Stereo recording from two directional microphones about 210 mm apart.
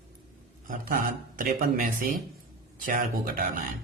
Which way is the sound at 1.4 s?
40° right (ahead or behind).